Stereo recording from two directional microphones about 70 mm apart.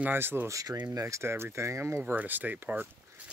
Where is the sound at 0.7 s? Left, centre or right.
Right.